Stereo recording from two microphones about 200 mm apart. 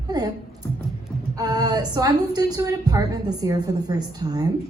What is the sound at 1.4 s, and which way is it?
A woman's voice, 20° right (ahead or behind).